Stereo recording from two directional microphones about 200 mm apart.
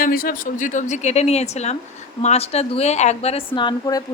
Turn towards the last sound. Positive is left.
turn(degrees=20)  # may be behind; listen again after turning